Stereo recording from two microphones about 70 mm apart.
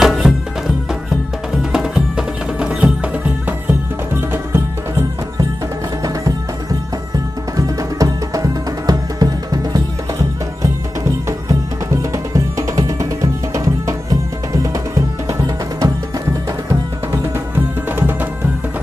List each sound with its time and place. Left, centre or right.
0.0 s music: centre
1.6 s music: centre
4.1 s music: right
6.0 s music: right
15.3 s music: right